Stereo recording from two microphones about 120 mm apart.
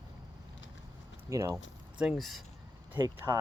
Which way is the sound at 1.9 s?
5° right (ahead or behind).